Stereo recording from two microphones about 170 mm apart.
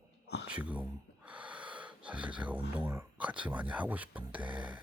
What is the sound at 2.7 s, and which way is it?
Speech, 15° right (ahead or behind).